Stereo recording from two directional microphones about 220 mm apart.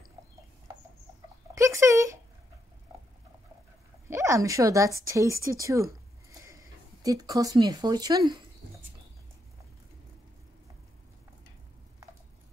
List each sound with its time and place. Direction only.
1.5 s speech: 15° right (ahead or behind)
4.1 s a woman's voice: 15° right (ahead or behind)